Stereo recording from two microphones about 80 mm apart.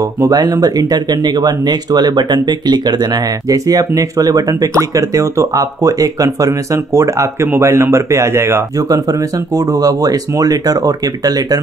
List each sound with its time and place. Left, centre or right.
0.3 s speech: right
3.4 s speech: right
9.7 s speech: right